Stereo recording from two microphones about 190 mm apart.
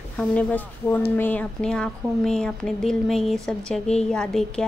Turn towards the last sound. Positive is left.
turn(degrees=5)  # may be behind; listen again after turning